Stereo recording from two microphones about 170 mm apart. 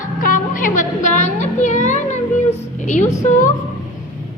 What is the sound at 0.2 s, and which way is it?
Music, 50° left (ahead or behind).